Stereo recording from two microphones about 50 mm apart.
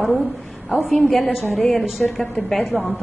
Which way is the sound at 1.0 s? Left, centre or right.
Centre.